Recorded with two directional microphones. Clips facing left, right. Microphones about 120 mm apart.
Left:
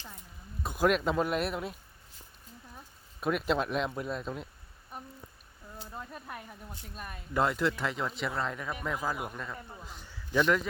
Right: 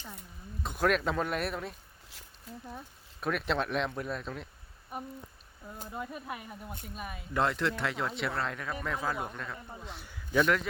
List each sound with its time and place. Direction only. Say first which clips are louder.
0.6 s speech: left 1 dB; 5° left (ahead or behind)
2.5 s speech: right 9 dB; 70° right (ahead or behind)
3.2 s speech: left 2 dB; 5° left (ahead or behind)
4.9 s speech: right 5 dB; 10° right (ahead or behind)